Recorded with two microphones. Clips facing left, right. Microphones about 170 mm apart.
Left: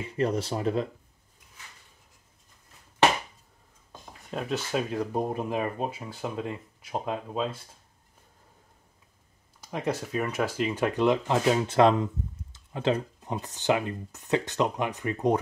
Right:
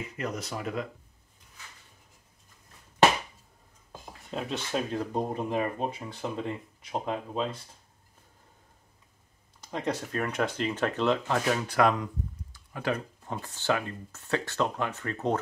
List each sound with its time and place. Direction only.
0.0 s speech: 30° left (ahead or behind)
4.3 s speech: 5° left (ahead or behind)
9.6 s speech: 5° left (ahead or behind)